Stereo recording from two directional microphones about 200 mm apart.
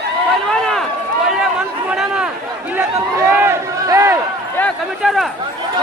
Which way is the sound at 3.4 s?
15° right (ahead or behind).